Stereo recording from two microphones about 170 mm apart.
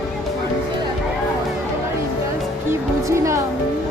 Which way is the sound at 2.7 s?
15° right (ahead or behind).